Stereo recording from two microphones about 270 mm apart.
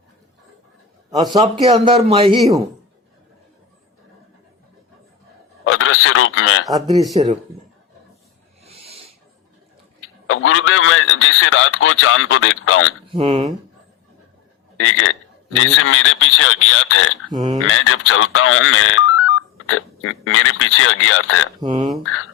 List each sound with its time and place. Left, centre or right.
1.1 s a man's voice: centre
5.6 s speech: left
7.1 s speech: centre
8.6 s a sound: right
10.2 s speech: left
13.1 s a man's voice: centre
14.8 s speech: left
17.3 s speech: centre
17.7 s speech: left
21.6 s speech: centre
22.0 s speech: left